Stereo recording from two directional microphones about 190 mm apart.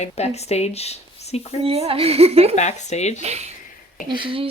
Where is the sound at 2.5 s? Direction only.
35° left (ahead or behind).